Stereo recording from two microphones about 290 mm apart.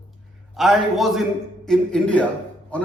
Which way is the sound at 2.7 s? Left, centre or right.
Centre.